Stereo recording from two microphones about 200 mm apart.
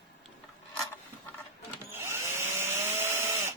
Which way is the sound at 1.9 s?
10° right (ahead or behind).